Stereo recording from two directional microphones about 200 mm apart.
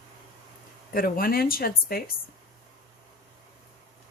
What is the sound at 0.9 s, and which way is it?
Speech, 45° left (ahead or behind).